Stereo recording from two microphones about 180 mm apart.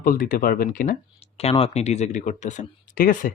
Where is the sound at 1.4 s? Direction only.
35° left (ahead or behind).